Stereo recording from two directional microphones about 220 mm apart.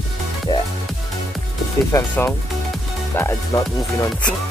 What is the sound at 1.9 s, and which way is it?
Speech, 10° left (ahead or behind).